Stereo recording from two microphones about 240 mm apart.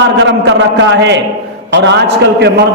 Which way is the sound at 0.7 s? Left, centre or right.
Right.